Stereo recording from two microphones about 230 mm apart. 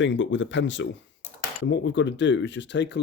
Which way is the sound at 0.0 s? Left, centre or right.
Left.